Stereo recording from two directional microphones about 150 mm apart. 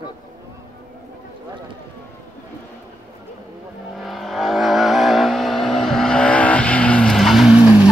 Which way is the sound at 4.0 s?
Centre (ahead or behind).